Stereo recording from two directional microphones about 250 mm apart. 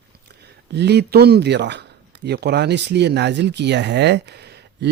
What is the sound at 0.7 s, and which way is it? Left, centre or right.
Speech, right.